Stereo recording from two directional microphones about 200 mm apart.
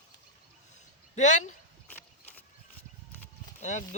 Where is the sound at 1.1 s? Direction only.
35° left (ahead or behind).